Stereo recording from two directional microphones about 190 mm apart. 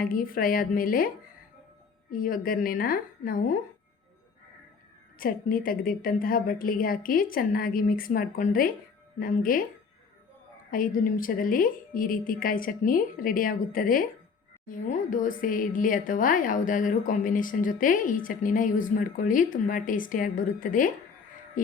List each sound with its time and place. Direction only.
0.0 s a woman's voice: 50° left (ahead or behind)
5.2 s a woman's voice: 50° left (ahead or behind)
10.7 s a woman's voice: 45° left (ahead or behind)